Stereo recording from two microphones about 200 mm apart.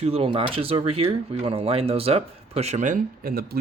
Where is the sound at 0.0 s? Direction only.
30° right (ahead or behind).